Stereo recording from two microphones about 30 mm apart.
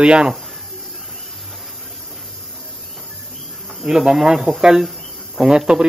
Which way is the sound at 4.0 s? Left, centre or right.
Centre.